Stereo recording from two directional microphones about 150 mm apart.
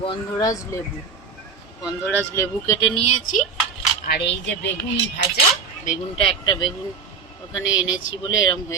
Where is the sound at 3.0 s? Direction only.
50° left (ahead or behind).